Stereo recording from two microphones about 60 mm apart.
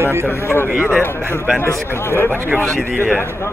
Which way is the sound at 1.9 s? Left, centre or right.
Left.